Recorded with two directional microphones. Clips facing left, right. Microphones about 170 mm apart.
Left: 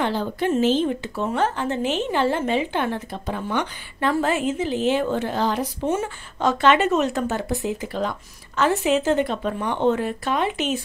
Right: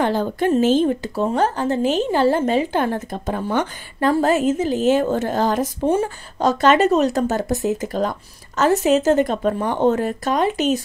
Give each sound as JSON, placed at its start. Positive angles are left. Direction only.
{"t": 0.0, "sound": "speech", "side_deg": -45}
{"t": 5.9, "sound": "speech", "side_deg": -35}